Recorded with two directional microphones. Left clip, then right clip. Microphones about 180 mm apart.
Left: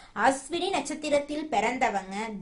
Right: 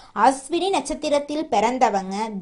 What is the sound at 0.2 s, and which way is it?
A woman's voice, 30° right (ahead or behind).